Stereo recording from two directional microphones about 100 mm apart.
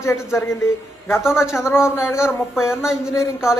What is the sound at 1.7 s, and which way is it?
Speech, 25° left (ahead or behind).